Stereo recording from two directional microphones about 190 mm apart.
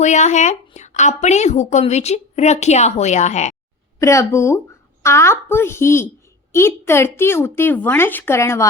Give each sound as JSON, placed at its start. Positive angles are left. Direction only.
{"t": 0.0, "sound": "speech", "side_deg": 40}
{"t": 4.0, "sound": "a woman's voice", "side_deg": 15}